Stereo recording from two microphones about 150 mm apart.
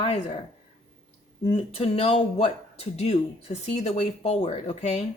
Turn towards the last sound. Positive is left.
turn(degrees=45)  # may be behind; listen again after turning